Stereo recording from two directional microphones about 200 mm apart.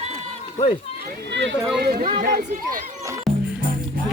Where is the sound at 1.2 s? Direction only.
60° right (ahead or behind); by 2.8 s 40° right (ahead or behind).